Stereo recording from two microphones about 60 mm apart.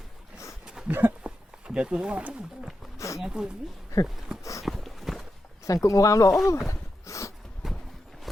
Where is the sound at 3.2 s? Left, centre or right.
Centre.